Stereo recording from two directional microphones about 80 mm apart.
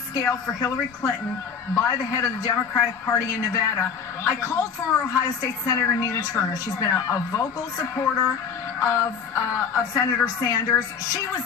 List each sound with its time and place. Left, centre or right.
0.1 s a woman's voice: left
2.7 s a woman's voice: left